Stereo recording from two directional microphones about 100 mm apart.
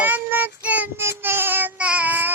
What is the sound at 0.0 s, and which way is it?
Child singing, 20° right (ahead or behind).